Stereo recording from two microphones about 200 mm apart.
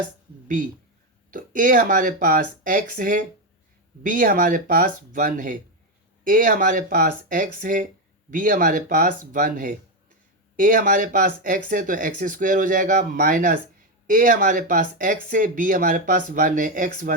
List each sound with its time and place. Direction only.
1.3 s speech: 40° right (ahead or behind)